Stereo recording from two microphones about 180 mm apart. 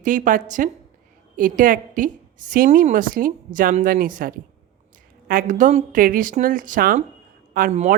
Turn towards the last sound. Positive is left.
turn(degrees=-40)  # may be behind; listen again after turning